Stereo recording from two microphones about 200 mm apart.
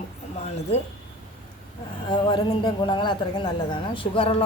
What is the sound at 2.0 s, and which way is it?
A woman's voice, 20° left (ahead or behind).